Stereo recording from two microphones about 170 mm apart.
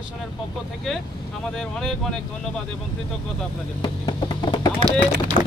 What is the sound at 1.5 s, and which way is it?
Speech, 5° left (ahead or behind).